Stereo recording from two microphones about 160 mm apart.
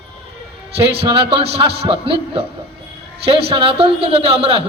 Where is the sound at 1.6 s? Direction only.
35° right (ahead or behind).